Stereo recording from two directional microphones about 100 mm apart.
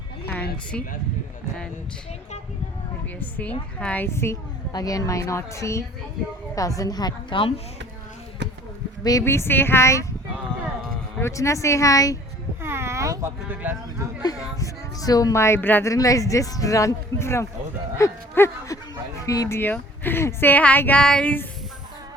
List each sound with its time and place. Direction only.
3.8 s a woman's voice: 15° left (ahead or behind)
4.1 s speech: 25° left (ahead or behind)
4.7 s a woman's voice: 35° left (ahead or behind); by 7.5 s 55° left (ahead or behind)
9.2 s speech: 25° left (ahead or behind)
11.2 s a woman's voice: 30° left (ahead or behind)
12.6 s a sound: 25° right (ahead or behind)
13.5 s speech: 20° right (ahead or behind)
14.2 s a woman's voice: 40° left (ahead or behind); by 15.9 s 20° left (ahead or behind)
15.9 s a woman's voice: 35° left (ahead or behind)
17.9 s a sound: 25° left (ahead or behind)
19.2 s a woman's voice: 35° left (ahead or behind)
19.5 s speech: 20° left (ahead or behind)